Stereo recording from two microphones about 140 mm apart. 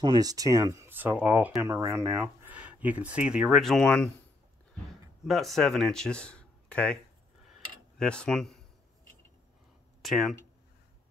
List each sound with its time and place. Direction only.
0.0 s speech: 30° right (ahead or behind); by 4.1 s 5° left (ahead or behind)
5.2 s speech: centre (ahead or behind)
8.0 s speech: 5° left (ahead or behind)
10.0 s speech: centre (ahead or behind)